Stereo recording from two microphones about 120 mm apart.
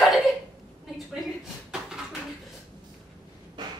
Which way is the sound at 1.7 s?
5° right (ahead or behind).